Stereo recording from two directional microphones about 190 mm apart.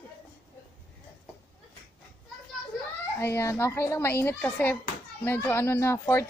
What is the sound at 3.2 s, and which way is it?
A woman's voice, 15° left (ahead or behind).